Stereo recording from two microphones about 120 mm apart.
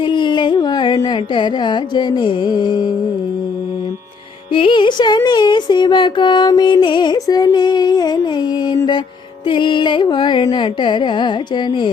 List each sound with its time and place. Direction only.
0.0 s a sound: 40° left (ahead or behind)
1.0 s speech: 40° left (ahead or behind)
4.5 s speech: 45° left (ahead or behind)